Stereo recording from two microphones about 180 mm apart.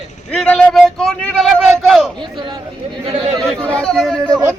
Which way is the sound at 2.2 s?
25° right (ahead or behind).